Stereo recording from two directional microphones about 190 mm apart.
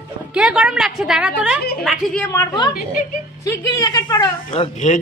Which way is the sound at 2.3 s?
20° left (ahead or behind).